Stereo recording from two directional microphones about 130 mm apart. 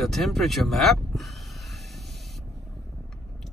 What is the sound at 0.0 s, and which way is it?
Speech, centre (ahead or behind).